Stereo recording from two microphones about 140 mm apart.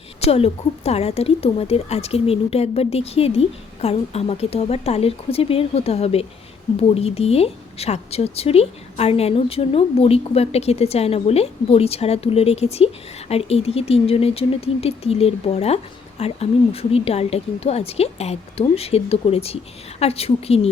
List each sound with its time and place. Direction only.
0.2 s a woman's voice: 45° left (ahead or behind)